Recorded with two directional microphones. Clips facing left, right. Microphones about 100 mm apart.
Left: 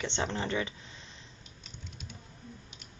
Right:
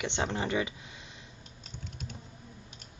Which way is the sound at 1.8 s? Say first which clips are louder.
Right 5 dB; 45° right (ahead or behind).